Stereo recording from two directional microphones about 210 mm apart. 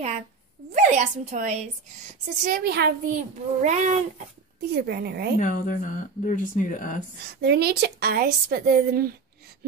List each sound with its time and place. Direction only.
0.7 s a woman's voice: 35° right (ahead or behind)
2.4 s a woman's voice: 45° right (ahead or behind)
4.7 s speech: 50° right (ahead or behind)
5.4 s speech: 40° left (ahead or behind)
7.4 s speech: 50° right (ahead or behind)